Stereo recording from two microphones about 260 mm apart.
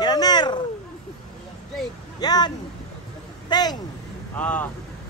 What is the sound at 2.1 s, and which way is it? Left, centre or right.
Speech, centre.